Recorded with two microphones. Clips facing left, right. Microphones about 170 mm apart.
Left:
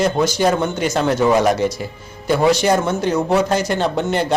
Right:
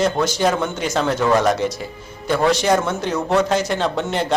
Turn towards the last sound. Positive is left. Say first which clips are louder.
# left 2 dB
turn(degrees=5)  # may be behind; listen again after turning